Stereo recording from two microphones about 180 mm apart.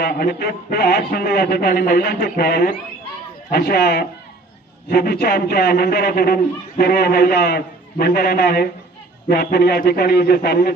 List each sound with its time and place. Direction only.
0.0 s a man's voice: 60° left (ahead or behind)